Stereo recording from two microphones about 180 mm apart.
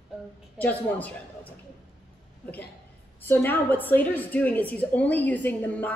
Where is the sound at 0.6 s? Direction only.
10° left (ahead or behind).